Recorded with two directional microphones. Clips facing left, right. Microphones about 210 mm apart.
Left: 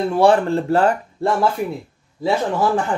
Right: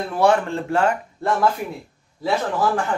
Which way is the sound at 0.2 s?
35° left (ahead or behind).